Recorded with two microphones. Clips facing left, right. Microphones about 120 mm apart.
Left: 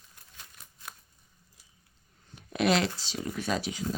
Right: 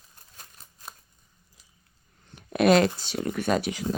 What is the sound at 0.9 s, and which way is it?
Scissors, 25° right (ahead or behind).